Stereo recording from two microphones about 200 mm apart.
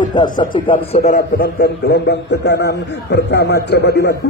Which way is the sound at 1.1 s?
50° left (ahead or behind).